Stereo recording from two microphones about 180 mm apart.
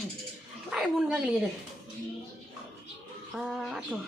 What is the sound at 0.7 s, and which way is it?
Speech, 5° right (ahead or behind).